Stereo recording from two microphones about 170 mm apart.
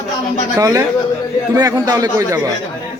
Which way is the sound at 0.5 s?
20° right (ahead or behind).